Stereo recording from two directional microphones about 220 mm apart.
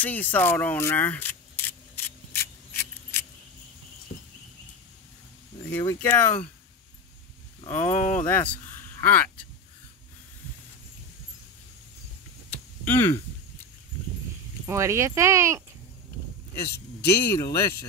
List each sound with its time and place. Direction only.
0.0 s keys jangling: 5° left (ahead or behind)
5.7 s speech: 5° left (ahead or behind)
7.6 s speech: 30° left (ahead or behind)
8.3 s speech: 10° left (ahead or behind)
12.4 s a sound: 10° left (ahead or behind)
14.7 s speech: 15° right (ahead or behind)
17.0 s speech: 10° left (ahead or behind)